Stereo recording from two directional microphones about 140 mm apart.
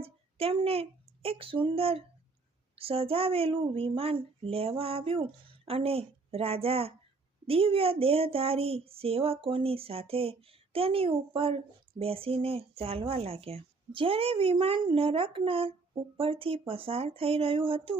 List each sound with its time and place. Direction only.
0.0 s a woman's voice: 45° right (ahead or behind)